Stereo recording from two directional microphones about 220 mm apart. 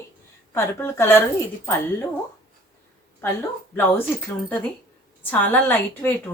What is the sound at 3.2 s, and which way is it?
Speech, 10° left (ahead or behind).